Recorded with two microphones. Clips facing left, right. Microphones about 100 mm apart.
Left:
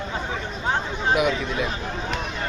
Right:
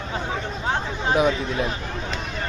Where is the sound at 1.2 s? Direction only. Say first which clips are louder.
Right 2 dB; 30° right (ahead or behind).